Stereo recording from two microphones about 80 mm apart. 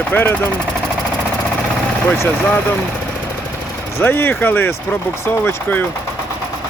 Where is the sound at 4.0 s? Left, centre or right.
Left.